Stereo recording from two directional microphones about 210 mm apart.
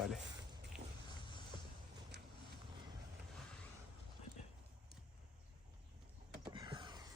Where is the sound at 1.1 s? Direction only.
20° left (ahead or behind).